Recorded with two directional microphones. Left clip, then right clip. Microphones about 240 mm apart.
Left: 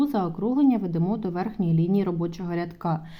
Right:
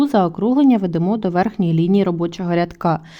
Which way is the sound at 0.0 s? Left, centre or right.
Right.